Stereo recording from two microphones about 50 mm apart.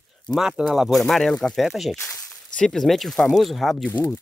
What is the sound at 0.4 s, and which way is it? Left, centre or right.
Speech, centre.